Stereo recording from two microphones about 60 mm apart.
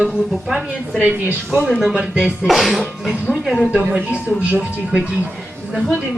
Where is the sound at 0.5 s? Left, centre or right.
Centre.